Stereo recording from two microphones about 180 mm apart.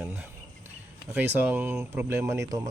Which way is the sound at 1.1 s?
10° right (ahead or behind).